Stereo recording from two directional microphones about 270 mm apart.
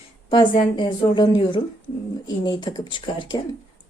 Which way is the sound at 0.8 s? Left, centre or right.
Centre.